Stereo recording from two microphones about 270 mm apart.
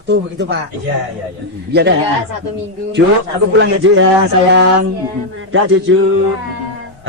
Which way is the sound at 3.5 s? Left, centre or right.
Right.